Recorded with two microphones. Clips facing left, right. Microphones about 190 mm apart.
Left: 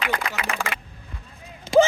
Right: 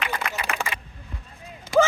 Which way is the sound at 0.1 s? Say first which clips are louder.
Left 2 dB; 90° left.